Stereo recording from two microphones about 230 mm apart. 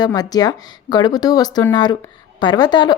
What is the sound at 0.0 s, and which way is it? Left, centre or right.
Speech, centre.